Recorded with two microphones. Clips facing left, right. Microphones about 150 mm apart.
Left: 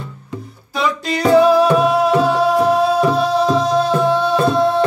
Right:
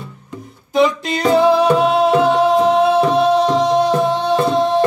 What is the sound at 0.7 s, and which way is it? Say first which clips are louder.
Music: right 4 dB; 20° right (ahead or behind).